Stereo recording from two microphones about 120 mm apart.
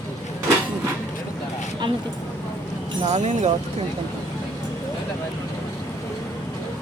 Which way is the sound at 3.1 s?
85° right.